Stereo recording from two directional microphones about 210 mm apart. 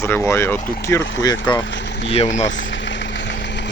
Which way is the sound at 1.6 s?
60° left (ahead or behind).